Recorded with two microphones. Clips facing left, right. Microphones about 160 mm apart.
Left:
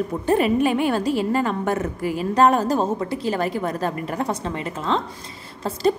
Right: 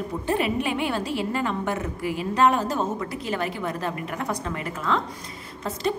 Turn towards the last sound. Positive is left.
turn(degrees=35)  # may be behind; listen again after turning